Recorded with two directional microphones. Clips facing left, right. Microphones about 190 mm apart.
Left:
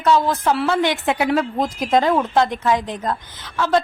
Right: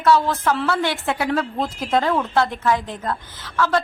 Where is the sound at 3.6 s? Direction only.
20° left (ahead or behind).